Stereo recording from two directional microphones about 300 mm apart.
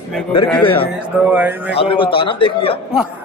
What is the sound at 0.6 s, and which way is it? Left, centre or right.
Speech, centre.